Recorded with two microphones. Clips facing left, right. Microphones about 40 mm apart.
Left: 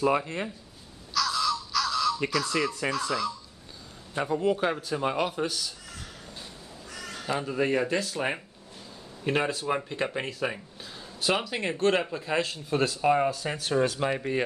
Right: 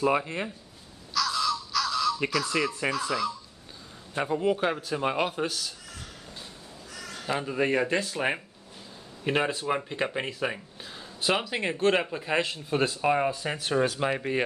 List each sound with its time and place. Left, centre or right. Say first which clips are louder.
0.0 s speech: even; centre
1.1 s crow: even; centre
2.9 s speech: even; centre; by 5.5 s right
7.2 s speech: even; centre
9.2 s speech: even; centre